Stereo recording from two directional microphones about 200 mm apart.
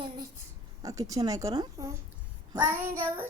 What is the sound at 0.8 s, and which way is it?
A woman's voice, 15° right (ahead or behind).